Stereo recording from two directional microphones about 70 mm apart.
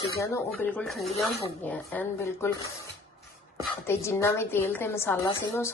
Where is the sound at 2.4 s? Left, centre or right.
Left.